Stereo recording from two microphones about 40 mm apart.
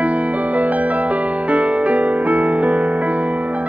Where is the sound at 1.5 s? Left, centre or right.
Right.